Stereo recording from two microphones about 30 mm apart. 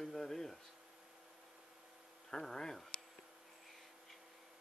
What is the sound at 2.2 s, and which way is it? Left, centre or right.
Speech, centre.